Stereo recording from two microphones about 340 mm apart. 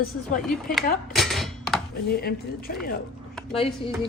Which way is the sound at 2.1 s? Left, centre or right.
Left.